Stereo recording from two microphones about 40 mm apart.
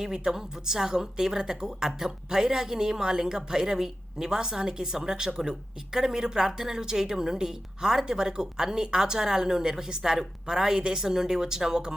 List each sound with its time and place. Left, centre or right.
0.0 s a woman's voice: centre